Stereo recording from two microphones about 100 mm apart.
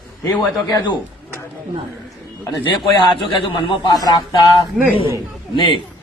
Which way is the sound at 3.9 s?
40° left (ahead or behind).